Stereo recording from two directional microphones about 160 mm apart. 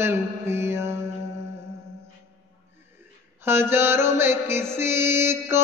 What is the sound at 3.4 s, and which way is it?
Music, 15° right (ahead or behind).